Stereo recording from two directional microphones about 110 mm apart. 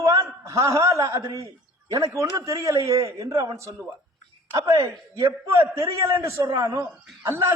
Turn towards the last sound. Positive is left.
turn(degrees=-25)  # may be behind; listen again after turning